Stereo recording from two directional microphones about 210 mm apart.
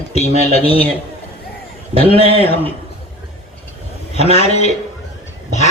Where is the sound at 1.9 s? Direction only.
25° left (ahead or behind).